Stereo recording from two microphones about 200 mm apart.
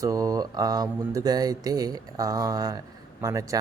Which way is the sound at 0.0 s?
15° right (ahead or behind).